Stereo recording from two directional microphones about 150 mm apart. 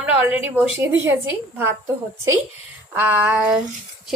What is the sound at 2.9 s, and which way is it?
Speech, 10° right (ahead or behind).